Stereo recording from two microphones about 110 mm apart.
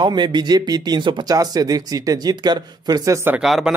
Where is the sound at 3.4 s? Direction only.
Centre (ahead or behind).